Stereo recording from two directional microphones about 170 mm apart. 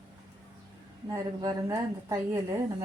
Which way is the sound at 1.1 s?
20° right (ahead or behind).